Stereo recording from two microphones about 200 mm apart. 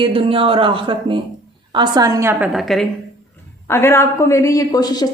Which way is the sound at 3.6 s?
10° left (ahead or behind).